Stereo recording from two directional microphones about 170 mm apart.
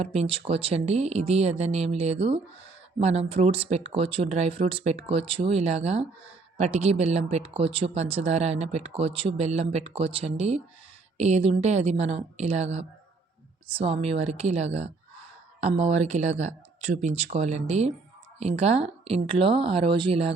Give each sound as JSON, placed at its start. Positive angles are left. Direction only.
{"t": 0.0, "sound": "speech", "side_deg": -40}